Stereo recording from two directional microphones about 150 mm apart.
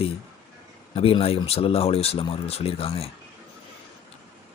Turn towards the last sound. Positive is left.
turn(degrees=40)  # may be behind; listen again after turning